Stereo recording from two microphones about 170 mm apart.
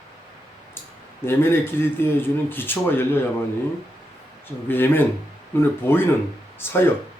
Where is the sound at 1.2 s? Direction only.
15° left (ahead or behind).